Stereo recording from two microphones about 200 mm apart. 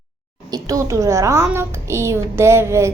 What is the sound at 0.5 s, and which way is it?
A woman's voice, 15° right (ahead or behind).